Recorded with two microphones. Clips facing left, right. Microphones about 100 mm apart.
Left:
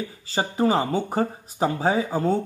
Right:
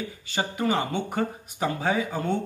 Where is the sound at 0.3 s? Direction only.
35° left (ahead or behind).